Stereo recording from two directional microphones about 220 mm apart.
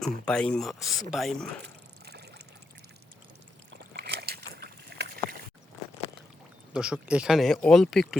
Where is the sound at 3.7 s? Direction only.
50° right (ahead or behind).